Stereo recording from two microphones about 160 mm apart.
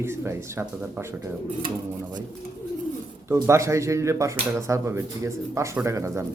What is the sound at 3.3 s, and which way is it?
A man's voice, 15° right (ahead or behind).